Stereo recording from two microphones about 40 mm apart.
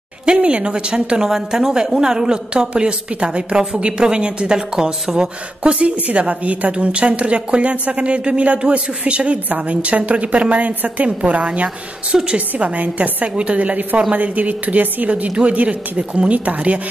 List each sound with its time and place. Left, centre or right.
0.2 s a woman's voice: right
2.7 s speech: right
5.6 s a woman's voice: right
12.1 s speech: right
12.4 s a woman's voice: right